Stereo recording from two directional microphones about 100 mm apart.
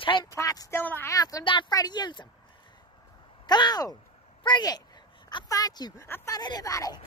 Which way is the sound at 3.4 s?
45° left (ahead or behind).